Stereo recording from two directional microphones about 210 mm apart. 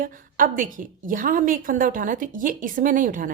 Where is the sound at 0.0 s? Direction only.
40° right (ahead or behind).